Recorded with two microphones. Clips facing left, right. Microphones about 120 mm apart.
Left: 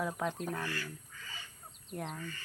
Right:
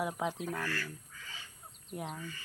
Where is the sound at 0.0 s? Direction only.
10° right (ahead or behind).